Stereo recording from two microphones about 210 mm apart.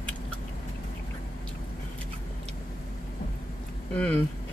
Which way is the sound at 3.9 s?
5° left (ahead or behind).